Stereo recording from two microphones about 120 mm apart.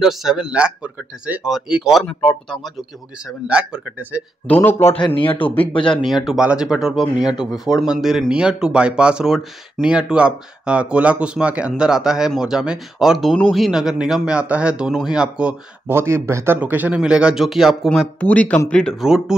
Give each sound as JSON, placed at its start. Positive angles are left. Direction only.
{"t": 0.0, "sound": "speech", "side_deg": -5}
{"t": 2.0, "sound": "speech", "side_deg": 5}
{"t": 3.4, "sound": "speech", "side_deg": -10}
{"t": 4.5, "sound": "speech", "side_deg": 15}
{"t": 5.0, "sound": "a man's voice", "side_deg": 45}
{"t": 6.0, "sound": "speech", "side_deg": 0}
{"t": 15.9, "sound": "speech", "side_deg": -20}
{"t": 18.2, "sound": "speech", "side_deg": 10}
{"t": 19.0, "sound": "speech", "side_deg": -5}